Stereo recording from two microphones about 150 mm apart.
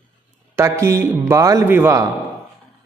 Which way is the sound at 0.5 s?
20° right (ahead or behind).